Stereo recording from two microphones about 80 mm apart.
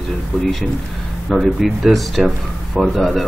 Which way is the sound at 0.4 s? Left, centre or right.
Centre.